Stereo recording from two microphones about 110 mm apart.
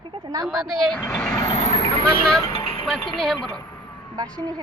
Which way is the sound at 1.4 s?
50° left (ahead or behind).